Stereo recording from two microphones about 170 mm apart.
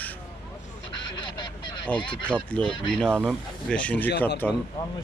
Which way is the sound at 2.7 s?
30° left (ahead or behind).